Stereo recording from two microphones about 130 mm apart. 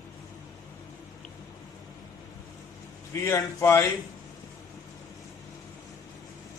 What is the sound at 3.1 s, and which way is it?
Speech, 20° left (ahead or behind).